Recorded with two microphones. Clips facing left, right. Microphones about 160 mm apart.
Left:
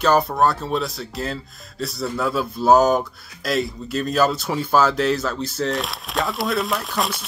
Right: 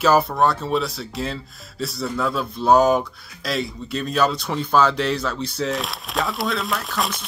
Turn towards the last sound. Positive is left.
turn(degrees=0)  # may be behind; listen again after turning